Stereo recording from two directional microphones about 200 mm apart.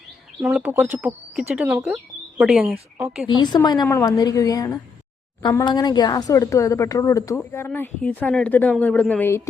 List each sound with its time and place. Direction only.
0.4 s speech: 10° right (ahead or behind)
3.2 s a woman's voice: 20° left (ahead or behind)